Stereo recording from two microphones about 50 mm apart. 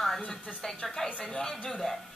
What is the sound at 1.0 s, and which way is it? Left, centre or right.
Speech, centre.